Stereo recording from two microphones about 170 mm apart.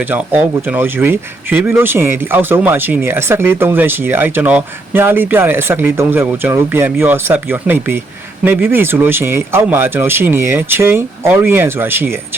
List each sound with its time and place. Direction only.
0.1 s speech: 10° right (ahead or behind)